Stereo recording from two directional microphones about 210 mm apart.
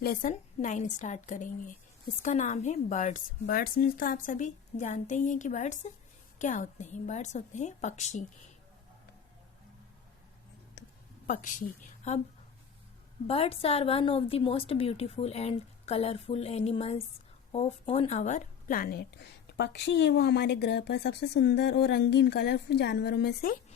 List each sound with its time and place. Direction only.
0.0 s a woman's voice: 45° left (ahead or behind)
10.8 s a sound: 50° left (ahead or behind)
11.3 s a woman's voice: 40° left (ahead or behind)
13.2 s a woman's voice: 30° left (ahead or behind); by 23.6 s 50° left (ahead or behind)